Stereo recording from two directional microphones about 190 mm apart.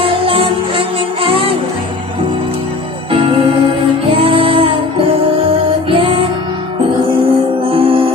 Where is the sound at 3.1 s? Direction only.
30° right (ahead or behind).